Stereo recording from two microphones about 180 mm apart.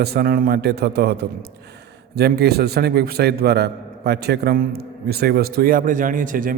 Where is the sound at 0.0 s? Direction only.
60° right (ahead or behind).